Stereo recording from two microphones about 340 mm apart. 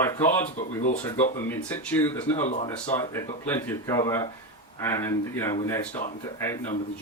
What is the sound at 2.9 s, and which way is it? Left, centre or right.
Speech, centre.